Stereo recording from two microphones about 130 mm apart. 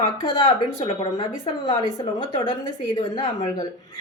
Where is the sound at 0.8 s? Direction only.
35° left (ahead or behind).